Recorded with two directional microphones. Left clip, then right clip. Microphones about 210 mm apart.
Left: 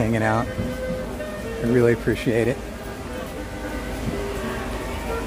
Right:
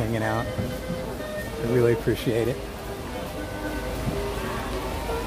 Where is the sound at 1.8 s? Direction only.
10° left (ahead or behind).